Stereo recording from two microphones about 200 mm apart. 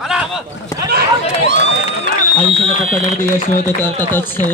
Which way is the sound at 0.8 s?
55° right (ahead or behind).